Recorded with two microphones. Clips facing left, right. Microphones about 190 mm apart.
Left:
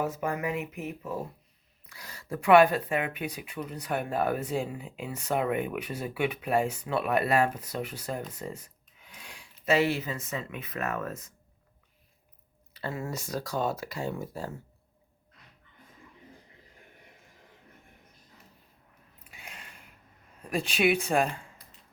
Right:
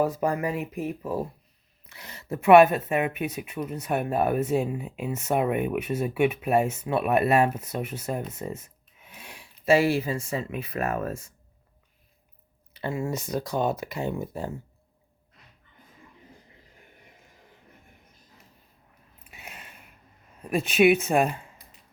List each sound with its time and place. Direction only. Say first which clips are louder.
0.0 s speech: right 5 dB; 35° right (ahead or behind)
1.9 s speech: right 3 dB; 20° right (ahead or behind)
12.7 s speech: right 5 dB; 20° right (ahead or behind)
19.3 s a sound: right 3 dB; 20° right (ahead or behind)
20.5 s speech: right 6 dB; 20° right (ahead or behind)